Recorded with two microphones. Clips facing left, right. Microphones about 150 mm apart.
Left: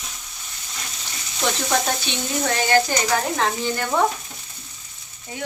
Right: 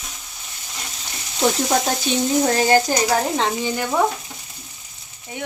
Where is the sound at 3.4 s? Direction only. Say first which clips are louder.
Right 1 dB; 15° right (ahead or behind).